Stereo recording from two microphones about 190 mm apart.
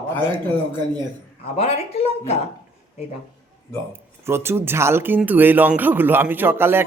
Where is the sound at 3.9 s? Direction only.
15° right (ahead or behind).